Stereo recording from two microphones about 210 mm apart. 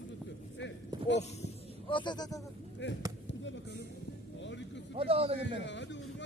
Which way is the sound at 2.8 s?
55° left (ahead or behind).